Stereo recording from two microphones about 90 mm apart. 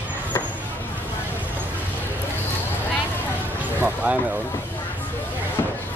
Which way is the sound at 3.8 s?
15° right (ahead or behind).